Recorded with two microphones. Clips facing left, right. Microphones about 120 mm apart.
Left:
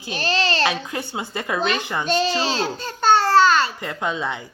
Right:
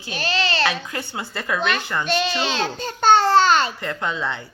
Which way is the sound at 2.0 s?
35° left (ahead or behind).